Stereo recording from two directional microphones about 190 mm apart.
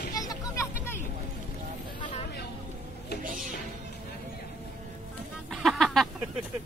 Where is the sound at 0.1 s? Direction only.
20° left (ahead or behind).